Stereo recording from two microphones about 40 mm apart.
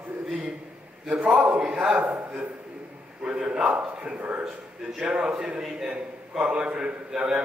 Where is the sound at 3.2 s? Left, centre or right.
Right.